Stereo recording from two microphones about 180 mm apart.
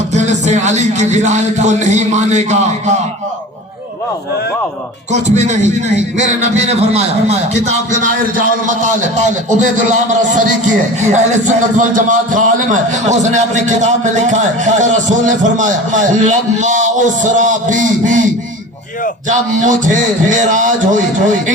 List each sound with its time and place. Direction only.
0.1 s a man's voice: 40° right (ahead or behind)
6.1 s a man's voice: 40° right (ahead or behind)
19.5 s a man's voice: 45° right (ahead or behind)